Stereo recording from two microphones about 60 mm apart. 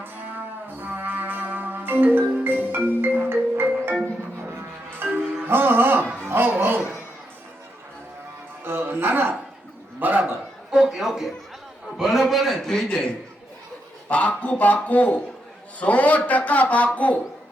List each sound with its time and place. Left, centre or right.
0.0 s music: right
4.9 s music: right
8.6 s a man's voice: right
10.7 s a sound: centre
11.9 s a man's voice: centre; by 17.2 s left